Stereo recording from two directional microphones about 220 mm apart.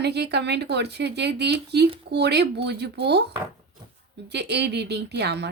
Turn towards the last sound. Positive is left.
turn(degrees=-50)  # may be behind; listen again after turning